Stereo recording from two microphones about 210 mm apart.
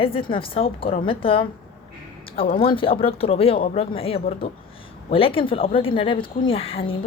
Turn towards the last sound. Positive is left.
turn(degrees=25)  # may be behind; listen again after turning